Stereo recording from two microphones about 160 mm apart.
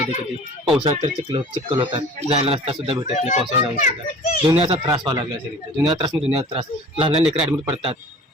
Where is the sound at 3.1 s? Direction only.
45° left (ahead or behind).